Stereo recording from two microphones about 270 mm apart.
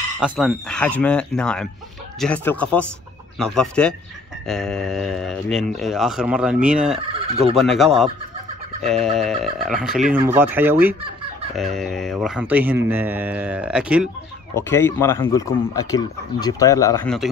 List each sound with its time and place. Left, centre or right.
0.2 s speech: centre
7.3 s speech: right
7.6 s speech: centre
14.5 s speech: centre